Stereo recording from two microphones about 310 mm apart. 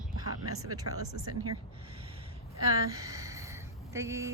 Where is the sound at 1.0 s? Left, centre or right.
Right.